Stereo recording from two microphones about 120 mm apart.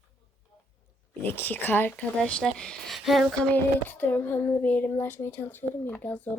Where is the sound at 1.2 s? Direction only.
15° left (ahead or behind); by 3.5 s centre (ahead or behind).